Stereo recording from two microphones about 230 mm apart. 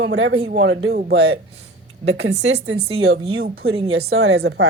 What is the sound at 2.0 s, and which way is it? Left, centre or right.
Speech, right.